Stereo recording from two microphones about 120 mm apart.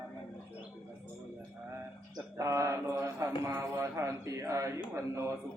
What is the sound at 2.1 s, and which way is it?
Mantra, 25° right (ahead or behind).